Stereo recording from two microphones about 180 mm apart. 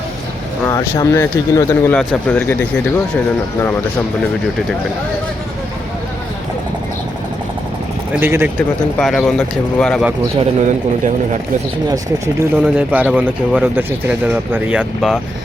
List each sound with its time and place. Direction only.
0.6 s speech: 20° left (ahead or behind)
8.1 s speech: 10° right (ahead or behind)
9.0 s speech: 5° left (ahead or behind)
10.6 s a man's voice: 45° right (ahead or behind)
11.9 s speech: 15° right (ahead or behind)